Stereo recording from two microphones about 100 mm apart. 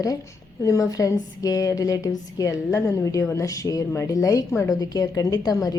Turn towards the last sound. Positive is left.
turn(degrees=35)  # may be behind; listen again after turning